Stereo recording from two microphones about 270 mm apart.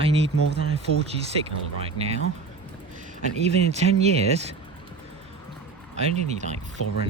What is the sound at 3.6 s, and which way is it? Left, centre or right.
Speech, right.